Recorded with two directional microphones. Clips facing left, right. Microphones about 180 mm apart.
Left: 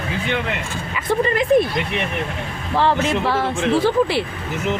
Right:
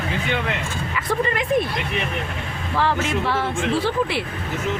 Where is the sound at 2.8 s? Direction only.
35° left (ahead or behind).